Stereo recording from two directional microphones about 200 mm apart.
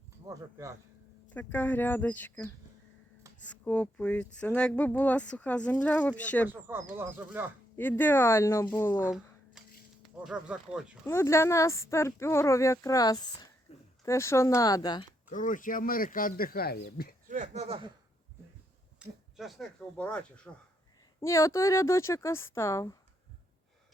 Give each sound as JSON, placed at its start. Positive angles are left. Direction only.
{"t": 0.3, "sound": "speech", "side_deg": -15}
{"t": 1.3, "sound": "speech", "side_deg": 10}
{"t": 3.5, "sound": "speech", "side_deg": 5}
{"t": 6.5, "sound": "speech", "side_deg": -10}
{"t": 7.8, "sound": "speech", "side_deg": 10}
{"t": 9.0, "sound": "a sound", "side_deg": -5}
{"t": 10.2, "sound": "speech", "side_deg": -5}
{"t": 11.0, "sound": "speech", "side_deg": 15}
{"t": 13.7, "sound": "a sound", "side_deg": 30}
{"t": 14.0, "sound": "speech", "side_deg": 15}
{"t": 15.3, "sound": "speech", "side_deg": 40}
{"t": 17.2, "sound": "speech", "side_deg": -40}
{"t": 18.9, "sound": "speech", "side_deg": 0}